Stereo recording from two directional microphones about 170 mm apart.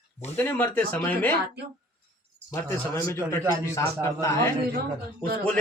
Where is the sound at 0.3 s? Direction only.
10° left (ahead or behind).